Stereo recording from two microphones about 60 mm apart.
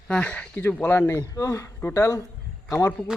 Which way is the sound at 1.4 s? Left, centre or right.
Left.